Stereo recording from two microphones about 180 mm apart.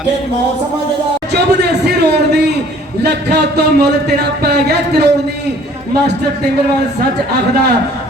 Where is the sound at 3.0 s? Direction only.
70° right (ahead or behind).